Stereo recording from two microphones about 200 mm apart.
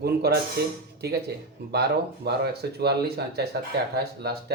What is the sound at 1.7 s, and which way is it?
Speech, 55° right (ahead or behind).